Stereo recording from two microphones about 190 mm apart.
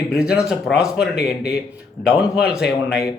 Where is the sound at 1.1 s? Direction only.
55° left (ahead or behind).